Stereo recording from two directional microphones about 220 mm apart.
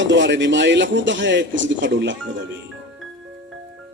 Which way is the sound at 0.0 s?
55° right (ahead or behind).